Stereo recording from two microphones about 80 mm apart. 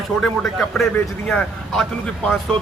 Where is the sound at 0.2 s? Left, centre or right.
Centre.